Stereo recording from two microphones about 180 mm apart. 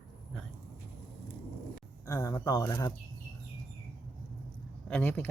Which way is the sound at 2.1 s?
20° left (ahead or behind).